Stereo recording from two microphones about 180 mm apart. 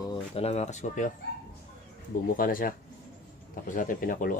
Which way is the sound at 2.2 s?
50° left (ahead or behind).